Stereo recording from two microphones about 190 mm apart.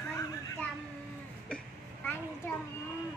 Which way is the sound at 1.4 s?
10° left (ahead or behind).